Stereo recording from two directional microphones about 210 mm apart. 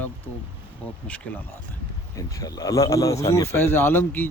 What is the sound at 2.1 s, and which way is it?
Speech, 15° left (ahead or behind).